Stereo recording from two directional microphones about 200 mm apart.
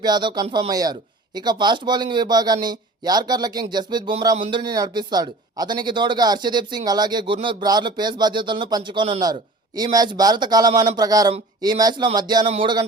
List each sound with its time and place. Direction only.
0.0 s a man's voice: 20° right (ahead or behind)